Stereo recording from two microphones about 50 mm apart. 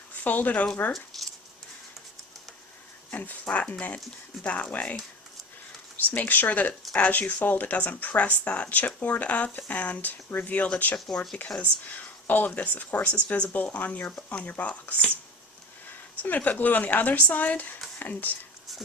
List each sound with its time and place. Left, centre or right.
0.2 s speech: left
0.9 s a sound: centre
3.1 s a sound: left
3.4 s speech: left
6.1 s speech: left
11.1 s speech: centre
11.6 s speech: left
16.2 s speech: left